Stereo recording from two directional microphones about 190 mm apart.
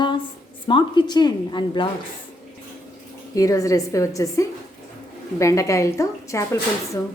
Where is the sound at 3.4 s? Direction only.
15° left (ahead or behind).